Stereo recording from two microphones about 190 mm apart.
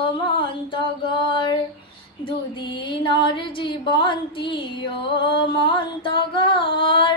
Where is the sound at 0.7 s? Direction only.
25° left (ahead or behind).